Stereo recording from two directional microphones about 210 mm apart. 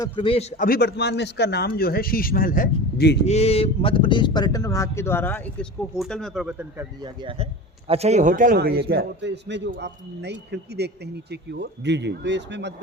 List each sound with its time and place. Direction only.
0.0 s a man's voice: 25° left (ahead or behind); by 3.2 s 50° left (ahead or behind)
3.2 s speech: 30° left (ahead or behind); by 6.8 s 5° right (ahead or behind)
7.0 s a man's voice: 25° right (ahead or behind); by 12.7 s 55° right (ahead or behind)